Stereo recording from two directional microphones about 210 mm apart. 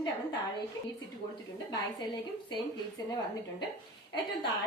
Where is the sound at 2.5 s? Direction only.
20° left (ahead or behind).